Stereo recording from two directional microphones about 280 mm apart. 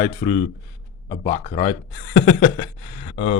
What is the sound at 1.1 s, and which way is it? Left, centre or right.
Speech, left.